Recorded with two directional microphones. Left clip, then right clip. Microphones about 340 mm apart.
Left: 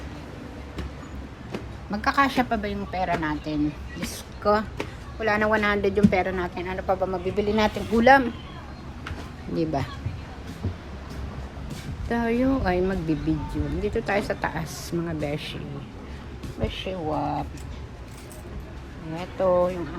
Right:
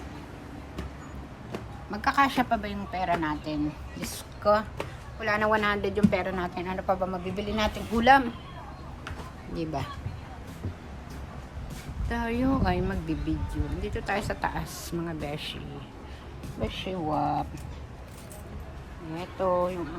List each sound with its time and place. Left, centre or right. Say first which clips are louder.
1.5 s speech: left 4 dB; centre
9.6 s speech: left 6 dB; centre
12.0 s speech: left 5 dB; centre
19.1 s speech: left 5 dB; centre